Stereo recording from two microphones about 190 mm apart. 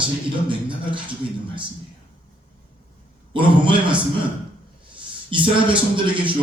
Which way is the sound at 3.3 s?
25° right (ahead or behind).